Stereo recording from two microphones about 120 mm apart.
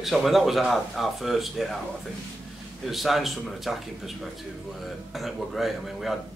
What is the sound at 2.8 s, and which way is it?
Speech, centre (ahead or behind).